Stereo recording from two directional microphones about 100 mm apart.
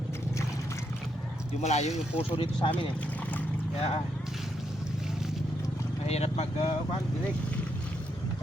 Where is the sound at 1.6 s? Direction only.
90° left.